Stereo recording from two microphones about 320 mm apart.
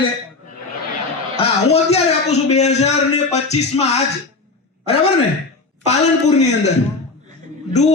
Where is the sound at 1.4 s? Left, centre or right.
Centre.